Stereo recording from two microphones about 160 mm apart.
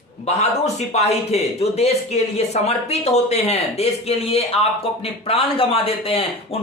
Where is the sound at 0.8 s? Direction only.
45° left (ahead or behind).